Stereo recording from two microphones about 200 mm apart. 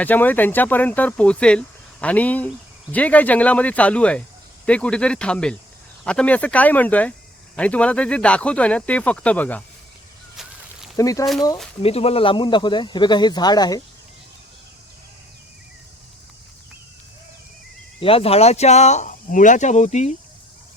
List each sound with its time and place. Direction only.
0.0 s speech: 10° left (ahead or behind)
10.9 s speech: 15° left (ahead or behind)
11.8 s speech: 30° left (ahead or behind)
18.0 s speech: 30° left (ahead or behind)